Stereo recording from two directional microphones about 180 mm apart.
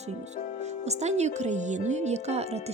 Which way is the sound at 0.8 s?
40° right (ahead or behind).